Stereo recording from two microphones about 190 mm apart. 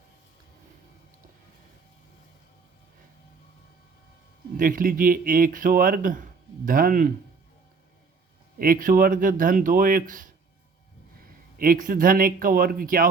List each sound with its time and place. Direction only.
4.5 s speech: 45° right (ahead or behind)
8.5 s speech: 45° right (ahead or behind)
11.5 s speech: 50° right (ahead or behind)